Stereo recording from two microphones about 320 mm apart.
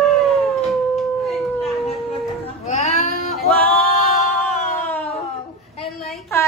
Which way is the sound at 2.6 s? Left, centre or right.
Centre.